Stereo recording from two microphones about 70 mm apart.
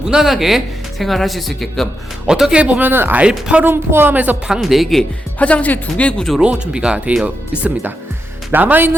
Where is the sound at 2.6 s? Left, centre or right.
Right.